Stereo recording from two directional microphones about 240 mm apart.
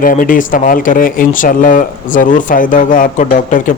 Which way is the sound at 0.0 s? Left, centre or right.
Left.